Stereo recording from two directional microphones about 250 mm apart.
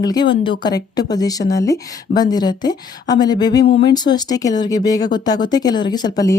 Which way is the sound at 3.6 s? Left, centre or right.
Left.